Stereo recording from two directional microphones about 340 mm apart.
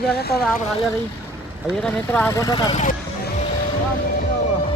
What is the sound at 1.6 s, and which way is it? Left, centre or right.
Speech, centre.